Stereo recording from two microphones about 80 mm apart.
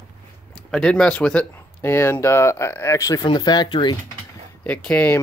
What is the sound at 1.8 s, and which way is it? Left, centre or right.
Speech, left.